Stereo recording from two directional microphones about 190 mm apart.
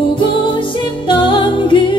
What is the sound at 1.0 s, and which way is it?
Music, 25° left (ahead or behind).